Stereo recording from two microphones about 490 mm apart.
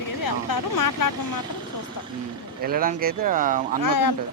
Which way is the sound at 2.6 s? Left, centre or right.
Centre.